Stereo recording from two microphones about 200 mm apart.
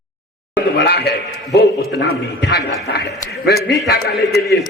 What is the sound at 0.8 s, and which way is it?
A man's voice, 55° left (ahead or behind).